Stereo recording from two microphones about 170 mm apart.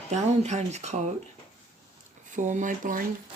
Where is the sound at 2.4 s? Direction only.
45° right (ahead or behind).